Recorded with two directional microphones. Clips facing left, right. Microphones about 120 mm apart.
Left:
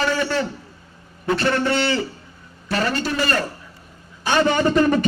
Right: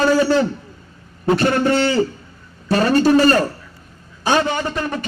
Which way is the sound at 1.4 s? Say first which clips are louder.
Right 3 dB; 45° right (ahead or behind).